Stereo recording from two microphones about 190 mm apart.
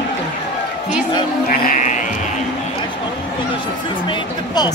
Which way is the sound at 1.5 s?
40° left (ahead or behind).